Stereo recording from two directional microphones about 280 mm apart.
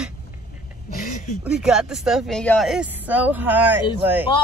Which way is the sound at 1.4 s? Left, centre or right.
Centre.